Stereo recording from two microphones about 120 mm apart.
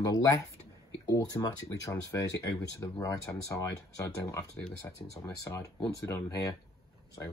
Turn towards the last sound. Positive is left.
turn(degrees=25)  # may be behind; listen again after turning